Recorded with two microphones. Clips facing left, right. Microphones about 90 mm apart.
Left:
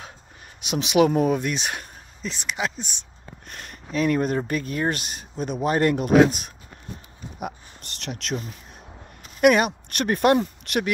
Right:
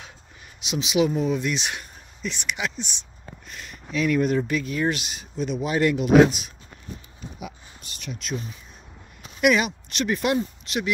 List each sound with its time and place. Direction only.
0.7 s speech: 55° left (ahead or behind); by 2.9 s 35° left (ahead or behind)
3.4 s speech: 50° left (ahead or behind)
8.0 s speech: 75° left (ahead or behind)
9.2 s speech: 45° left (ahead or behind)